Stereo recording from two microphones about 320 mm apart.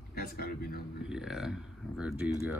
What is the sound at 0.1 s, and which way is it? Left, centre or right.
Speech, left.